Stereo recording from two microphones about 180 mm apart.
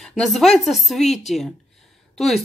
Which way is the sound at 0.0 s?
Centre (ahead or behind).